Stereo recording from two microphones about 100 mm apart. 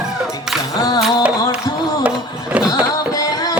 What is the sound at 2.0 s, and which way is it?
Music, 10° right (ahead or behind).